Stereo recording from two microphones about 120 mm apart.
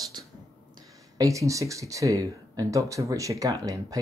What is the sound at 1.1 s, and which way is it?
Speech, 25° right (ahead or behind).